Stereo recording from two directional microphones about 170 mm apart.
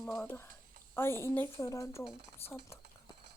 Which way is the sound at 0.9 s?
15° left (ahead or behind).